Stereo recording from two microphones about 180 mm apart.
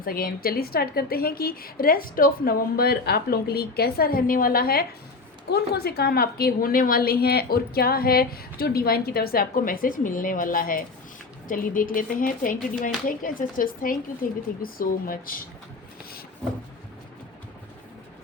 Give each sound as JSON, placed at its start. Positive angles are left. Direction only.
{"t": 0.0, "sound": "a woman's voice", "side_deg": 55}
{"t": 16.4, "sound": "vehicle", "side_deg": 5}